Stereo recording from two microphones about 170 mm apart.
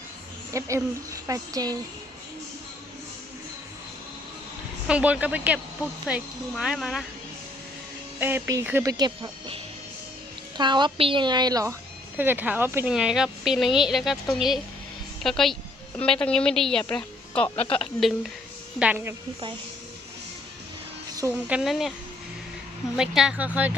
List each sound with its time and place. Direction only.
0.5 s speech: 20° right (ahead or behind)
4.9 s a woman's voice: 5° right (ahead or behind)
8.2 s speech: 10° right (ahead or behind)
10.6 s speech: 25° right (ahead or behind)
12.1 s a woman's voice: 10° right (ahead or behind); by 17.5 s 5° left (ahead or behind)
17.6 s speech: 35° left (ahead or behind)
18.8 s speech: 10° right (ahead or behind)
21.2 s speech: 10° right (ahead or behind)
23.0 s speech: 5° right (ahead or behind)